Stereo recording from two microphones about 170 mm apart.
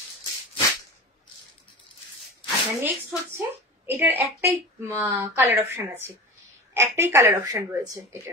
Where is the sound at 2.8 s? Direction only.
15° right (ahead or behind).